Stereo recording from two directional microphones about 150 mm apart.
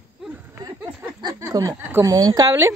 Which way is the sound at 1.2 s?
25° right (ahead or behind).